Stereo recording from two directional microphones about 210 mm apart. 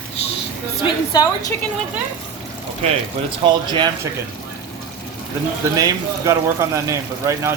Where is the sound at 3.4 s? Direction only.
20° right (ahead or behind).